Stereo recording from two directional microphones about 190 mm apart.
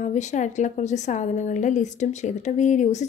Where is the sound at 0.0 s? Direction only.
40° left (ahead or behind).